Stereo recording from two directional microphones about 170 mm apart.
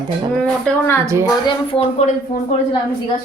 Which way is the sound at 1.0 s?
15° right (ahead or behind).